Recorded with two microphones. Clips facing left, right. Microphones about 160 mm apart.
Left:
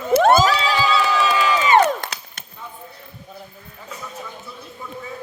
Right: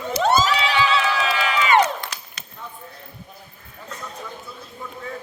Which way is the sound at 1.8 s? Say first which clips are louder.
Left 3 dB; 50° left (ahead or behind).